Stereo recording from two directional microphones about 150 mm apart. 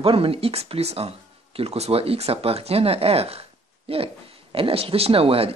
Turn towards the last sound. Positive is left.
turn(degrees=-40)  # may be behind; listen again after turning